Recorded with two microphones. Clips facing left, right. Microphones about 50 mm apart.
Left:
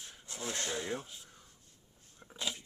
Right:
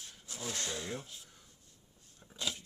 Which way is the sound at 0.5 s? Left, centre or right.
Centre.